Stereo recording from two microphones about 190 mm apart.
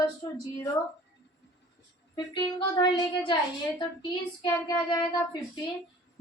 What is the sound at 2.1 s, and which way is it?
Child singing, 20° left (ahead or behind).